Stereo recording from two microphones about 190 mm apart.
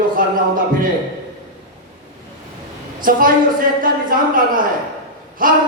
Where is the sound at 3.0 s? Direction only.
45° right (ahead or behind).